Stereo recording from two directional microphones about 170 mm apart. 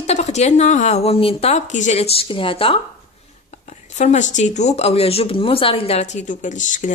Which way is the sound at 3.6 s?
45° left (ahead or behind).